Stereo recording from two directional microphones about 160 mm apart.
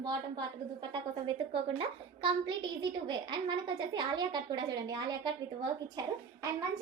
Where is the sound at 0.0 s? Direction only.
25° right (ahead or behind).